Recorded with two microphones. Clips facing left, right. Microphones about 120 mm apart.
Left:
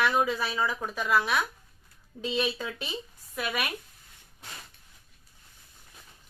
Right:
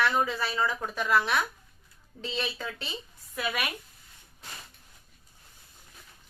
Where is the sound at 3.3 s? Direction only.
5° left (ahead or behind).